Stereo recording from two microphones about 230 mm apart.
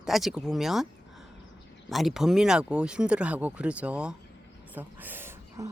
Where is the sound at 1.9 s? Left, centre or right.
Centre.